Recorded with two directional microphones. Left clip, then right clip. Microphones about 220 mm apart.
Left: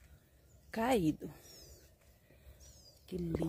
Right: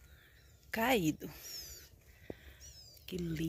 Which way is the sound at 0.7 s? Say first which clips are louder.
Right 1 dB; 5° left (ahead or behind).